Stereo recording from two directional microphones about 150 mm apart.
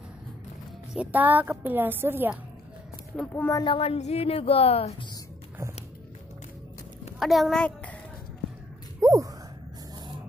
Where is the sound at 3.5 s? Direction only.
35° left (ahead or behind).